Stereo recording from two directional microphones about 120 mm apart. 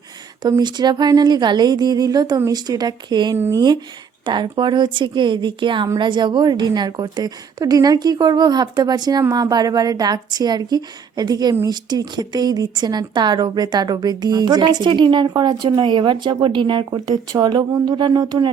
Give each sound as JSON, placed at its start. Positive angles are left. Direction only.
{"t": 0.4, "sound": "a woman's voice", "side_deg": -35}